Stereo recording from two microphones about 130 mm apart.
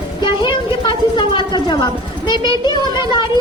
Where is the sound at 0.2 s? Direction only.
35° left (ahead or behind).